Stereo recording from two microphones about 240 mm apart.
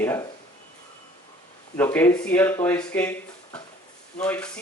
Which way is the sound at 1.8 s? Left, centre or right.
Centre.